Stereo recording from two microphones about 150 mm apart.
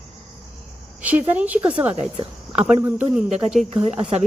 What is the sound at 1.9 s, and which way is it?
Speech, 40° right (ahead or behind).